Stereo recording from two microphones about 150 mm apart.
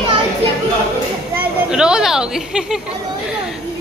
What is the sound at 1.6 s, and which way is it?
Speech, 5° right (ahead or behind).